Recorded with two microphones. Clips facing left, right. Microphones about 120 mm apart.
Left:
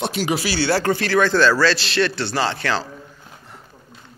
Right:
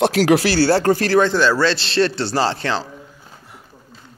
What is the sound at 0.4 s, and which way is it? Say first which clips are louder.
Speech: right 6 dB; 50° right (ahead or behind).